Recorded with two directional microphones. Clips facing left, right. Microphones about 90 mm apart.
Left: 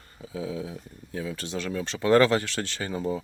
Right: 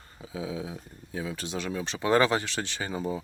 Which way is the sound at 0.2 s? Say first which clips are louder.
Left 2 dB; 15° right (ahead or behind).